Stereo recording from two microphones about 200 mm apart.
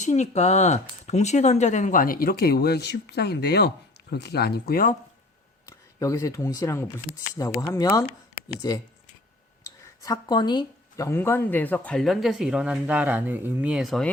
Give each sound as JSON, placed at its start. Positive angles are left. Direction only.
{"t": 0.0, "sound": "speech", "side_deg": 35}
{"t": 5.6, "sound": "speech", "side_deg": 15}
{"t": 10.0, "sound": "speech", "side_deg": 20}